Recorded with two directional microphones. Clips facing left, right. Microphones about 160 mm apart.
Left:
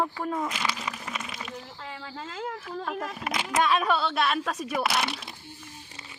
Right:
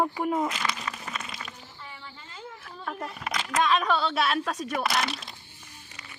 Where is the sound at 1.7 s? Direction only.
90° left.